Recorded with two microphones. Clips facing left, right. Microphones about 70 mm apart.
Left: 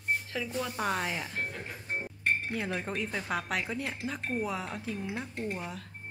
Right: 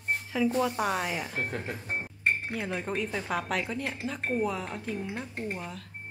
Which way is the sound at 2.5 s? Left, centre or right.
Centre.